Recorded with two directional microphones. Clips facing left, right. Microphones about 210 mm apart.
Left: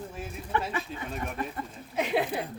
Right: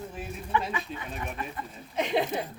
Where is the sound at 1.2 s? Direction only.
40° left (ahead or behind).